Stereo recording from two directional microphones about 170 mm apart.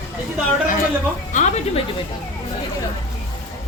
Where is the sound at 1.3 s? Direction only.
45° left (ahead or behind).